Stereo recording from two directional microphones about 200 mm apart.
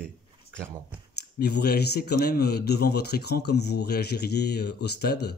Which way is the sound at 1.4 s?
55° left (ahead or behind).